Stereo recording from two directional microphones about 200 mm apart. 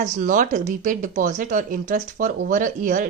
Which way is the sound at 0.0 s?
40° right (ahead or behind).